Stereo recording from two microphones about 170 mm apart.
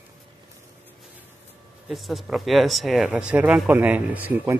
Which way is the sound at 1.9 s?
Centre (ahead or behind).